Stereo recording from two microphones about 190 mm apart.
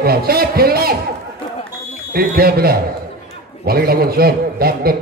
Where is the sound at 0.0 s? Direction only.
55° right (ahead or behind).